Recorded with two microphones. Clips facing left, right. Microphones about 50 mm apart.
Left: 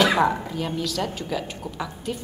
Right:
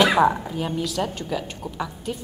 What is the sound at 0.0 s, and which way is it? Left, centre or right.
A woman's voice, centre.